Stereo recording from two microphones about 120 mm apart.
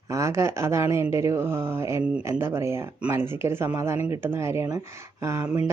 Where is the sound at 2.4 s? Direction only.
20° right (ahead or behind).